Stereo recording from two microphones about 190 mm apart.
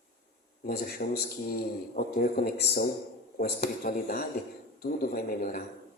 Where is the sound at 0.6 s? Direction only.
50° left (ahead or behind).